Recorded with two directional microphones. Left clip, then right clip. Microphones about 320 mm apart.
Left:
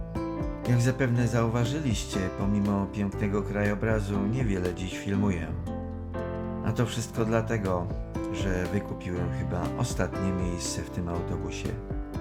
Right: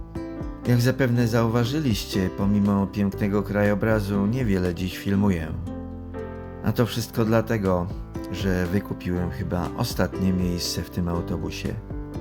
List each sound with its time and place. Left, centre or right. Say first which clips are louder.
0.7 s speech: right 6 dB; centre
6.7 s speech: right 8 dB; centre